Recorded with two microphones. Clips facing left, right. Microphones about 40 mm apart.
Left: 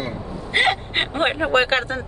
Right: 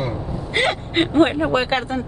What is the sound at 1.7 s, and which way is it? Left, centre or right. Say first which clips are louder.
Speech: even; left.